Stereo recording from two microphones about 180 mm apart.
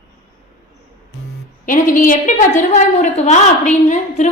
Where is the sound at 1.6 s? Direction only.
45° left (ahead or behind).